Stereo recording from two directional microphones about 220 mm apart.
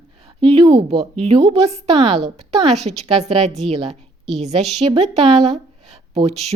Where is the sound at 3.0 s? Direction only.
30° right (ahead or behind).